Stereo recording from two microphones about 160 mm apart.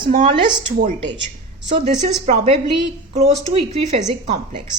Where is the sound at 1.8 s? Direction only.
45° right (ahead or behind).